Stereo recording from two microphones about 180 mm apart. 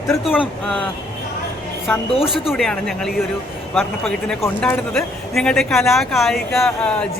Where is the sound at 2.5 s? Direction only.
5° left (ahead or behind).